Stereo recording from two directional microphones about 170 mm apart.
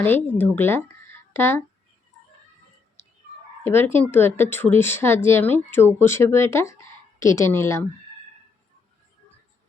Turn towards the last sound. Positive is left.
turn(degrees=15)  # may be behind; listen again after turning